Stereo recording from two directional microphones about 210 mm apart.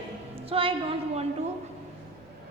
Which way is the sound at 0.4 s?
25° right (ahead or behind).